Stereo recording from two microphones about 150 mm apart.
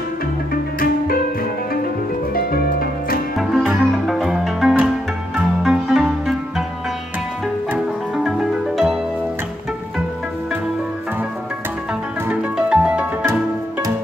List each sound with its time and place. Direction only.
0.7 s music: 75° left (ahead or behind)
2.5 s music: 80° left
3.3 s music: 5° right (ahead or behind)
7.7 s music: 5° right (ahead or behind)
12.3 s music: 10° right (ahead or behind)